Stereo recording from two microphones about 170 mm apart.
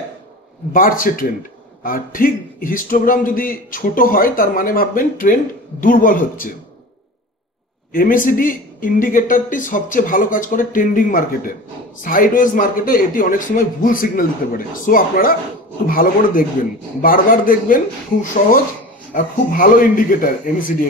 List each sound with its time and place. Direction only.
0.7 s speech: 55° left (ahead or behind)
7.9 s speech: 55° left (ahead or behind)